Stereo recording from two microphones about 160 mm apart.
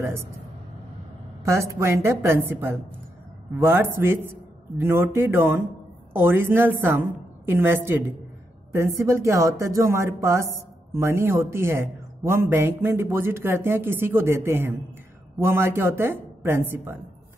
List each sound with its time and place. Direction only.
0.0 s speech: 15° right (ahead or behind)
1.4 s speech: 20° right (ahead or behind)